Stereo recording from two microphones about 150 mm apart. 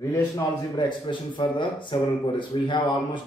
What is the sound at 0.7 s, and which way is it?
Speech, 30° left (ahead or behind).